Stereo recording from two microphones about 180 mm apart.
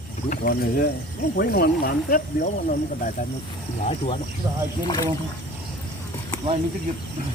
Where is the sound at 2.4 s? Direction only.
45° left (ahead or behind).